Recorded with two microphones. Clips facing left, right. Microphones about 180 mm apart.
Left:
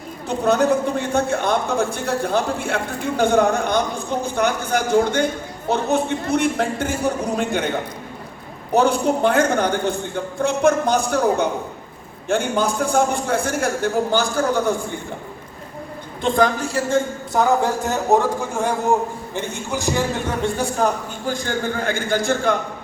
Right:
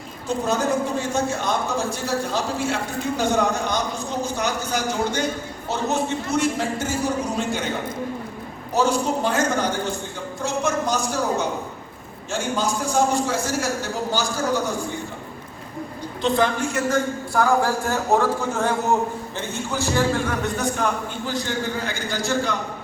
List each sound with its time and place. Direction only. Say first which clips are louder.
0.3 s a man's voice: left 5 dB; 60° left (ahead or behind)
8.7 s a man's voice: left 4 dB; 60° left (ahead or behind)
16.2 s a woman's voice: left 2 dB; 45° left (ahead or behind); by 18.7 s 15° left (ahead or behind)
19.7 s a man's voice: even; 15° left (ahead or behind); by 22.5 s 55° left (ahead or behind)